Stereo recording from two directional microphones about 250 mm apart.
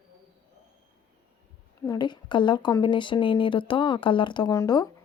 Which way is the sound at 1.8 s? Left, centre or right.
Centre.